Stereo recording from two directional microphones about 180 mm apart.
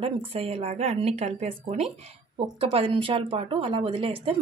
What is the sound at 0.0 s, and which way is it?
Speech, 35° right (ahead or behind).